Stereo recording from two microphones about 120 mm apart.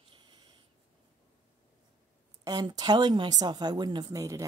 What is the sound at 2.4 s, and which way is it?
Speech, 35° right (ahead or behind).